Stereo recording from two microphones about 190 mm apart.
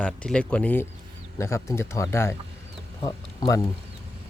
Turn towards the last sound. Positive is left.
turn(degrees=20)  # may be behind; listen again after turning